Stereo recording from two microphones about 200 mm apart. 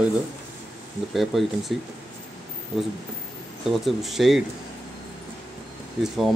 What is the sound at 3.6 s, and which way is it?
Speech, centre (ahead or behind).